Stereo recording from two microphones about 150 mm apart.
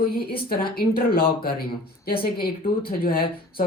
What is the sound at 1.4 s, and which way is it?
Speech, 90° left.